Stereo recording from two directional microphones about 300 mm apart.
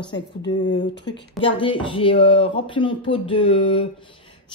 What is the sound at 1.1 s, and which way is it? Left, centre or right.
Speech, centre.